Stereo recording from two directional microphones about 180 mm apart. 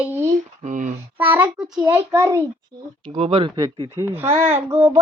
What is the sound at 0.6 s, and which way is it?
Speech, 45° right (ahead or behind).